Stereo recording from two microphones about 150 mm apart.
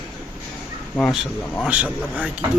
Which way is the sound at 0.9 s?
10° left (ahead or behind).